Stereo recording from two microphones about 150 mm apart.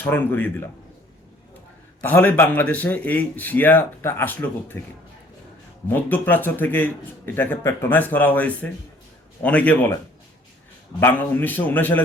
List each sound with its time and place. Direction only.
0.0 s speech: 15° left (ahead or behind)
2.0 s speech: 10° left (ahead or behind)
5.9 s speech: 10° left (ahead or behind)
11.0 s speech: 10° left (ahead or behind)